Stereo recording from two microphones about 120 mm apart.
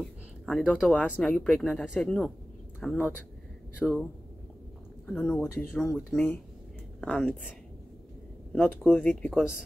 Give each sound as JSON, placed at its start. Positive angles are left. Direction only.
{"t": 0.0, "sound": "a sound", "side_deg": 0}
{"t": 0.9, "sound": "speech", "side_deg": 10}
{"t": 5.4, "sound": "speech", "side_deg": 20}
{"t": 5.8, "sound": "a woman's voice", "side_deg": 5}
{"t": 8.6, "sound": "speech", "side_deg": 10}
{"t": 9.3, "sound": "speech", "side_deg": -5}